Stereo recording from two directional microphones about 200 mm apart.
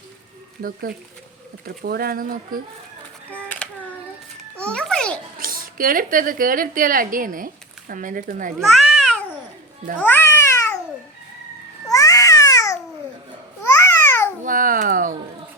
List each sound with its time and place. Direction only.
0.6 s speech: 45° right (ahead or behind)
3.2 s a sound: 10° left (ahead or behind)
4.5 s music: 5° left (ahead or behind)
5.4 s speech: 45° right (ahead or behind)
8.5 s babbling: centre (ahead or behind)
10.0 s music: 10° left (ahead or behind)
11.9 s babbling: 15° left (ahead or behind)
14.4 s babbling: 45° right (ahead or behind)